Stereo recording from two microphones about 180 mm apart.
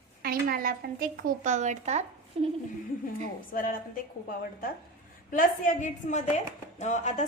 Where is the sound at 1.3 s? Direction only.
45° right (ahead or behind).